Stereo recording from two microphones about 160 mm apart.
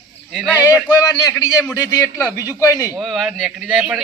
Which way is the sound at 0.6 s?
10° right (ahead or behind).